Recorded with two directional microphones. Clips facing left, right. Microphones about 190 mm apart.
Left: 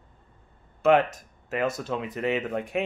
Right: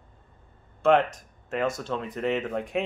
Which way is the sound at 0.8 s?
5° left (ahead or behind).